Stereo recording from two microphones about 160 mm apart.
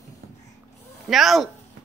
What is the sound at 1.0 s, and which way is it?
Speech, centre (ahead or behind).